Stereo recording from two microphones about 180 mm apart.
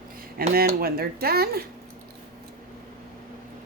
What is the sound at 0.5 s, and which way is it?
Speech, 55° right (ahead or behind).